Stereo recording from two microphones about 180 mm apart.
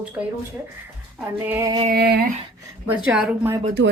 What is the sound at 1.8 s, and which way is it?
Speech, 60° right (ahead or behind).